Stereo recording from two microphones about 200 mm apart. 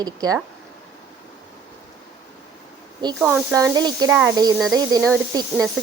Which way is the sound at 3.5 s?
15° right (ahead or behind).